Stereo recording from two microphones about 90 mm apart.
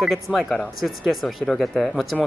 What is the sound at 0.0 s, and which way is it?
Speech, 5° right (ahead or behind).